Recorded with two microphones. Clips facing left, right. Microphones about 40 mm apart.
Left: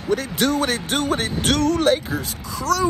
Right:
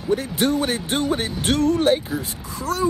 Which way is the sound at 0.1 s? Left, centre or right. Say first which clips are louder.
Even; left.